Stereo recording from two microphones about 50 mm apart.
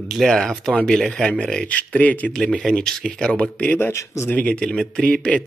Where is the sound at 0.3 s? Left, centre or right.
Centre; by 2.3 s left.